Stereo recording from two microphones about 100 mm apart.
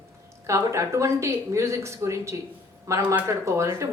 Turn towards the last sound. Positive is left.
turn(degrees=-30)  # may be behind; listen again after turning